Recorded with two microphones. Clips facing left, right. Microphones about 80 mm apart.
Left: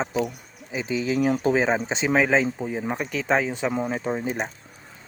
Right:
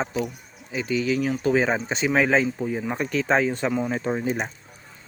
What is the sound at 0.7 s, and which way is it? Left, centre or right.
Speech, centre.